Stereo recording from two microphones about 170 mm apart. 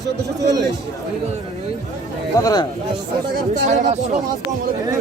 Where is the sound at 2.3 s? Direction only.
20° left (ahead or behind).